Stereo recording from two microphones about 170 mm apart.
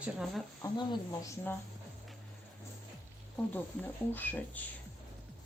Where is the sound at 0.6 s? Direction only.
25° left (ahead or behind).